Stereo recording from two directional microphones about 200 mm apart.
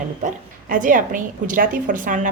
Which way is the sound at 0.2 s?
40° right (ahead or behind).